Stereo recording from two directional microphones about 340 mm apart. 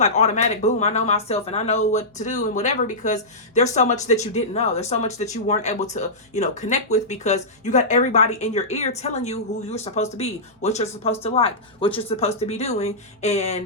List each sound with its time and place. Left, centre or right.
0.0 s speech: centre